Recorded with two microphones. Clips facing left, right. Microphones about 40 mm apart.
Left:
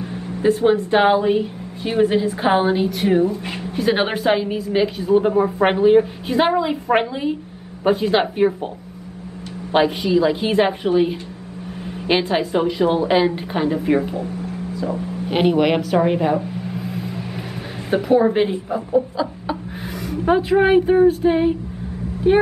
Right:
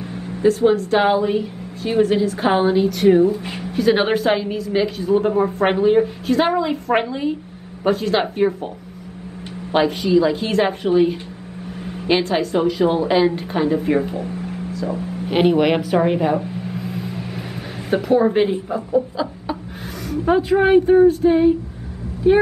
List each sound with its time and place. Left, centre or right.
0.1 s a woman's voice: left; by 8.5 s centre
9.7 s a woman's voice: centre
15.2 s a woman's voice: centre